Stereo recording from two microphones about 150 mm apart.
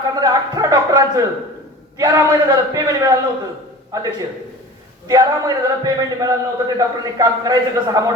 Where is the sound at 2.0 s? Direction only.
25° right (ahead or behind).